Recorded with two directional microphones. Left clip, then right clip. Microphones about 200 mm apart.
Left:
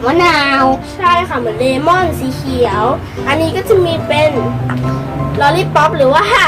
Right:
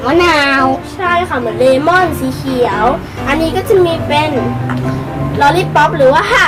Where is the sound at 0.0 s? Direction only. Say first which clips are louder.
Even; 5° right (ahead or behind).